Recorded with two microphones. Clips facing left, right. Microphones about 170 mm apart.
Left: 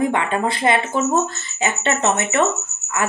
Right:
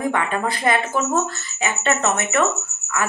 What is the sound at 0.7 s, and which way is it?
Speech, 25° left (ahead or behind).